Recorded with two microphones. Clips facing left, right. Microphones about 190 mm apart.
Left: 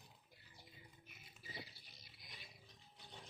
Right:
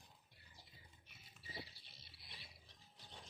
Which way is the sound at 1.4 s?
30° right (ahead or behind).